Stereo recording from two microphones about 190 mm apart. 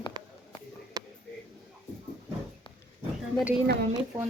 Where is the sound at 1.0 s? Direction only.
20° right (ahead or behind).